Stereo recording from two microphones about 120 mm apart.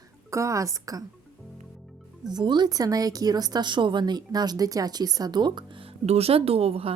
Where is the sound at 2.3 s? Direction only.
35° right (ahead or behind).